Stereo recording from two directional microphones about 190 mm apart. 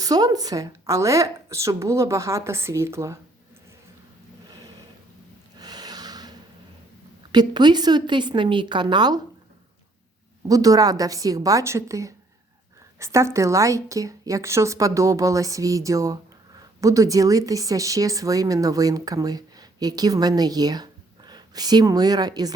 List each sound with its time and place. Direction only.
0.0 s a woman's voice: 20° right (ahead or behind)
5.5 s snort: 20° right (ahead or behind)
7.3 s a woman's voice: 25° right (ahead or behind)
10.5 s a woman's voice: 20° right (ahead or behind)